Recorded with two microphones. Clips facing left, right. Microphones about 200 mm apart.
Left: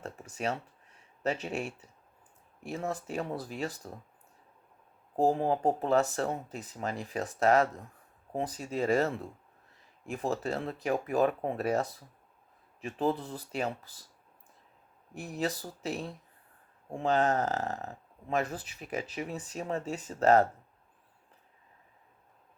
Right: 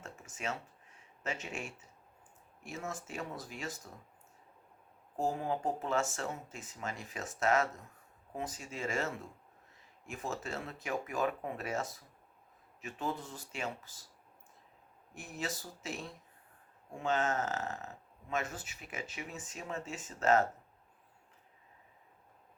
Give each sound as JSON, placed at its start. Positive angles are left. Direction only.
{"t": 0.0, "sound": "a sound", "side_deg": 35}
{"t": 1.2, "sound": "speech", "side_deg": 35}
{"t": 5.1, "sound": "speech", "side_deg": 35}
{"t": 15.1, "sound": "speech", "side_deg": 35}